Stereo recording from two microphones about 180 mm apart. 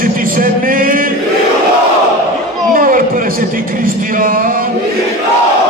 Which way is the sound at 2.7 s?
50° right (ahead or behind).